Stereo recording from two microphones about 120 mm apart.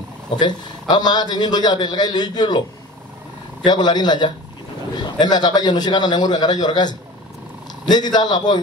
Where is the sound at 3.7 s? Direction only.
35° left (ahead or behind).